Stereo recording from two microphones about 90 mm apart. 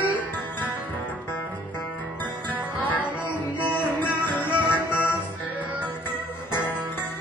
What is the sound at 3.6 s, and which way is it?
Music, 20° left (ahead or behind).